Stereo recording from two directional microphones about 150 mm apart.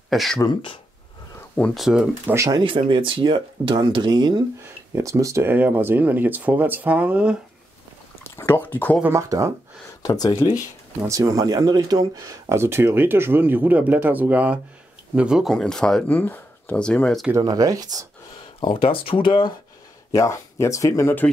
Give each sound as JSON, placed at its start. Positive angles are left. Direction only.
{"t": 0.1, "sound": "speech", "side_deg": 0}
{"t": 1.6, "sound": "speech", "side_deg": 0}
{"t": 2.3, "sound": "speech", "side_deg": -20}
{"t": 2.9, "sound": "speech", "side_deg": -35}
{"t": 8.2, "sound": "speech", "side_deg": 15}
{"t": 9.0, "sound": "speech", "side_deg": -20}
{"t": 10.0, "sound": "speech", "side_deg": 25}
{"t": 11.1, "sound": "speech", "side_deg": -20}
{"t": 17.3, "sound": "speech", "side_deg": -25}
{"t": 18.6, "sound": "speech", "side_deg": 35}
{"t": 20.1, "sound": "speech", "side_deg": 20}